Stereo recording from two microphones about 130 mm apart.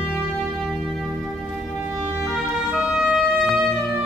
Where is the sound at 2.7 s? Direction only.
5° right (ahead or behind).